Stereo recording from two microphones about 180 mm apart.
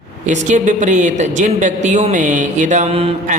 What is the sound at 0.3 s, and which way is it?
A woman's voice, 40° right (ahead or behind).